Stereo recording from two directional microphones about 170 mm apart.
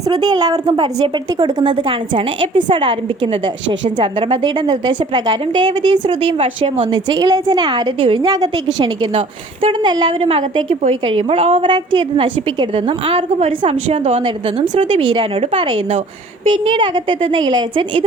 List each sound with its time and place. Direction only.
0.1 s a woman's voice: 25° right (ahead or behind)